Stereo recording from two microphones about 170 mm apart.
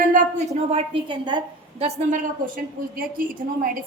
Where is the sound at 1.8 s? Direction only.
40° right (ahead or behind).